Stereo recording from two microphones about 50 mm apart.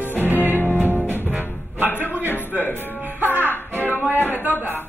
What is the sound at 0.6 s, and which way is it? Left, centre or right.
Music, left.